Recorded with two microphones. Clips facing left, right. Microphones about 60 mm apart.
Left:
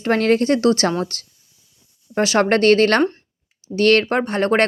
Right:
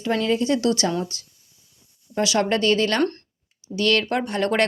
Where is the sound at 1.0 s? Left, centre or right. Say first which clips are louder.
Left 5 dB; left.